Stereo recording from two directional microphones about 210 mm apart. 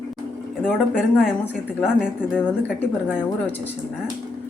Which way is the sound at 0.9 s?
5° left (ahead or behind).